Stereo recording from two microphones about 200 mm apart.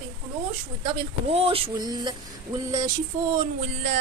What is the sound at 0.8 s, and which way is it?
Speech, 30° right (ahead or behind).